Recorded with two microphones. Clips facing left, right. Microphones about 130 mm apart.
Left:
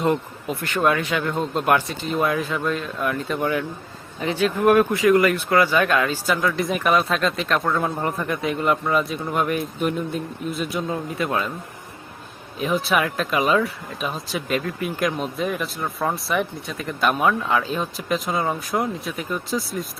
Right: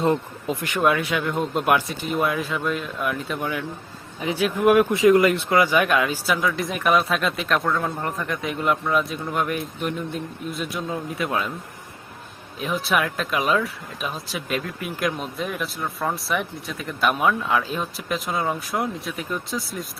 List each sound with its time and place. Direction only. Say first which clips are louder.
0.0 s speech: even; 30° right (ahead or behind)
0.5 s speech: even; 15° right (ahead or behind)
4.2 s speech: left 1 dB; 10° right (ahead or behind)
4.9 s a man's voice: right 1 dB; 25° right (ahead or behind); by 11.5 s centre (ahead or behind)
12.5 s speech: left 2 dB; centre (ahead or behind)